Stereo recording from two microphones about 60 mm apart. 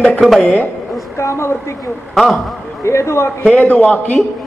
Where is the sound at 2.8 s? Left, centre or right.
Left.